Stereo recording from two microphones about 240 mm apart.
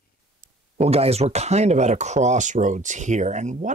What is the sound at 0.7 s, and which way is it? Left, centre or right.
Speech, right.